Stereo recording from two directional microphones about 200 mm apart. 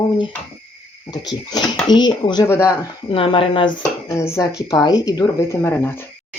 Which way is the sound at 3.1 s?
25° left (ahead or behind).